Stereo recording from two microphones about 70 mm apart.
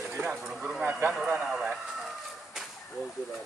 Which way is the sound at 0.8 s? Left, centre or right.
Right.